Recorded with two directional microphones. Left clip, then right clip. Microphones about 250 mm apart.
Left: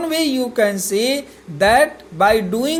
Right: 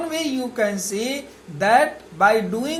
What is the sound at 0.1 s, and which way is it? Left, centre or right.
A woman's voice, left.